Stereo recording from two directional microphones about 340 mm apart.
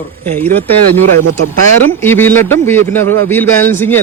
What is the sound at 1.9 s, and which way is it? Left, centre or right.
A man's voice, centre.